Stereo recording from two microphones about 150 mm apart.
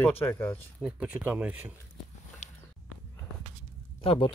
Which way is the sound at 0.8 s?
5° right (ahead or behind).